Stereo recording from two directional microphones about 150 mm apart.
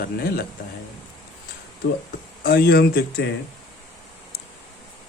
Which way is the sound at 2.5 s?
90° left.